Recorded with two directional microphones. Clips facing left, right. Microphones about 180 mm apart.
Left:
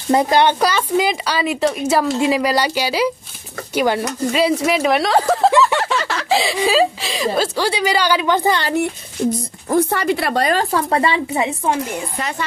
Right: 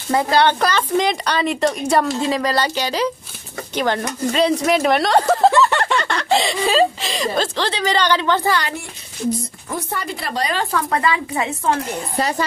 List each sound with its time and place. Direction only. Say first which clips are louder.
0.1 s speech: left 2 dB; 20° left (ahead or behind)
9.8 s speech: left 10 dB; 75° left (ahead or behind); by 10.6 s 55° left (ahead or behind)
10.6 s speech: left 2 dB; 30° left (ahead or behind); by 11.8 s 15° left (ahead or behind)